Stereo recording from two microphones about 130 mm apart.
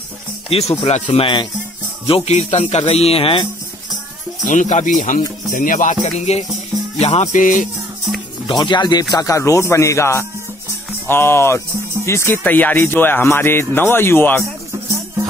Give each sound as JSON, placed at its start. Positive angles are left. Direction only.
{"t": 0.5, "sound": "speech", "side_deg": 50}
{"t": 1.0, "sound": "speech", "side_deg": 40}
{"t": 2.0, "sound": "a man's voice", "side_deg": 50}
{"t": 4.5, "sound": "speech", "side_deg": 70}
{"t": 6.1, "sound": "a man's voice", "side_deg": 55}
{"t": 7.3, "sound": "music", "side_deg": 80}
{"t": 8.5, "sound": "speech", "side_deg": 35}